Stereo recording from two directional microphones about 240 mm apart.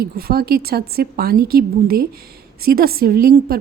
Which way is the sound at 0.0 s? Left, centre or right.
Right.